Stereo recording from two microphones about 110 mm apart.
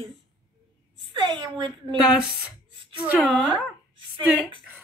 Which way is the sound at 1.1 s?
45° right (ahead or behind).